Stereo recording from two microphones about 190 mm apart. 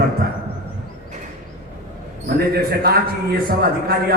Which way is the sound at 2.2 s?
55° right (ahead or behind).